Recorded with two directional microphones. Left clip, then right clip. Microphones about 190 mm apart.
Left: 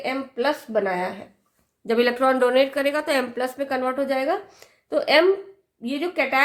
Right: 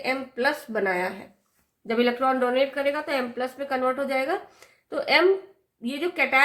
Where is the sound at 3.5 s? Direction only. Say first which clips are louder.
Even; 35° left (ahead or behind).